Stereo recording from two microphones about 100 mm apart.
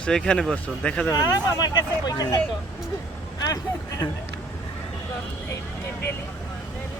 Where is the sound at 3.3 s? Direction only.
40° left (ahead or behind).